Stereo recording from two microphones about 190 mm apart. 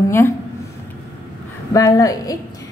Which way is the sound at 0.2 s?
10° left (ahead or behind).